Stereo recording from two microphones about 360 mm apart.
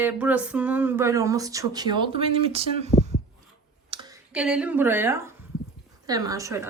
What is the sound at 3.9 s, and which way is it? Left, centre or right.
Speech, centre.